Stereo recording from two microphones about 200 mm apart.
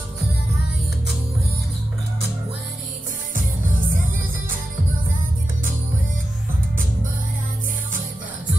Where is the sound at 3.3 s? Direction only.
45° right (ahead or behind).